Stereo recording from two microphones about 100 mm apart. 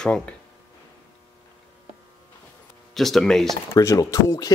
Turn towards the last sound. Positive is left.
turn(degrees=35)  # may be behind; listen again after turning